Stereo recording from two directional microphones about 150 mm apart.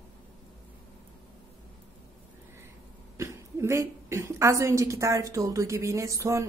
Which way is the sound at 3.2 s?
20° right (ahead or behind).